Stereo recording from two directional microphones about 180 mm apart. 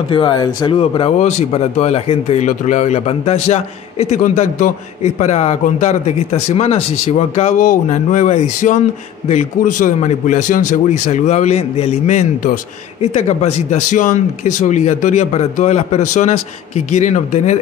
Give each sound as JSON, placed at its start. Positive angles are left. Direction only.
{"t": 0.1, "sound": "a man's voice", "side_deg": 25}